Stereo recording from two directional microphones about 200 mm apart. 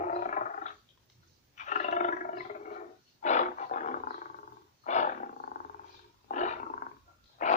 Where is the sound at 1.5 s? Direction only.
40° left (ahead or behind).